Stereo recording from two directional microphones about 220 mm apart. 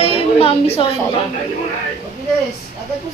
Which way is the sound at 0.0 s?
25° left (ahead or behind).